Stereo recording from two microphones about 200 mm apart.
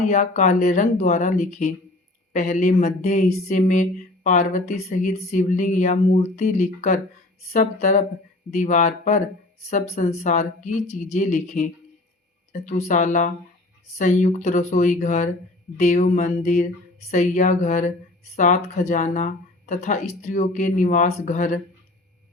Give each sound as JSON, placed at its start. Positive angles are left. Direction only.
{"t": 0.1, "sound": "speech", "side_deg": 40}